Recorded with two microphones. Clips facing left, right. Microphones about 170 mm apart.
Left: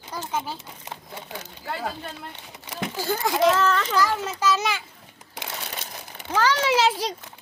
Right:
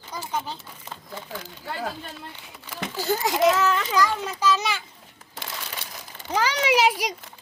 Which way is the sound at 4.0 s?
10° left (ahead or behind).